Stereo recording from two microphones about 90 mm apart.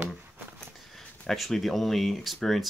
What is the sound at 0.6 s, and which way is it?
Speech, 5° left (ahead or behind).